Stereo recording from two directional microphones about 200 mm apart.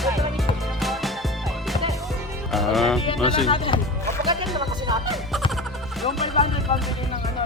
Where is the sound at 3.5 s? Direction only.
25° left (ahead or behind).